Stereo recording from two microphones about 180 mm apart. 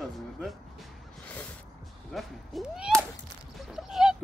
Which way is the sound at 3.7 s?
Centre (ahead or behind).